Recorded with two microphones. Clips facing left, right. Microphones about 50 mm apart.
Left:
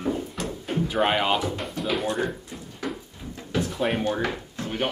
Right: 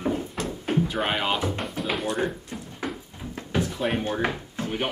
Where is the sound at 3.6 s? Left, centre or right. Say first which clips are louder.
Left 2 dB; centre.